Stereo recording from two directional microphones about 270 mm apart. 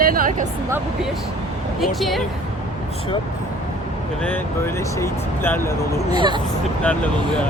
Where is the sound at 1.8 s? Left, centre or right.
Centre.